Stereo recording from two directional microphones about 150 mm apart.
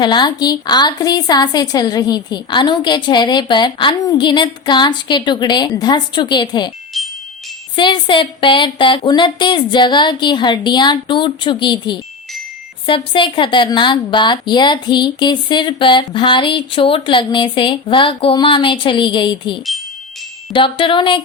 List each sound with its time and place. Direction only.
0.0 s a woman's voice: 30° left (ahead or behind)
7.0 s music: centre (ahead or behind)
7.8 s a woman's voice: 35° left (ahead or behind)